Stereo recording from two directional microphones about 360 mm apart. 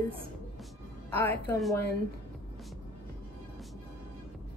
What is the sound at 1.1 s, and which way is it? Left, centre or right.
Speech, centre.